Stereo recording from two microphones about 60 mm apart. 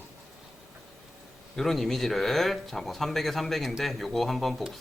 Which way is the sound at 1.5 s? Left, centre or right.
Centre.